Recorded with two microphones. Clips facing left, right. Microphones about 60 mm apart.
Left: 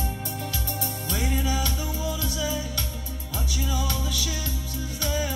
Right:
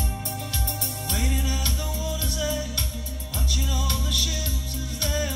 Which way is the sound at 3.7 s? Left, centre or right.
Centre.